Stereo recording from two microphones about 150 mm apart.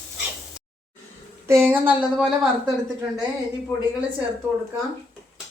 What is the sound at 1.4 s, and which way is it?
Speech, 15° right (ahead or behind).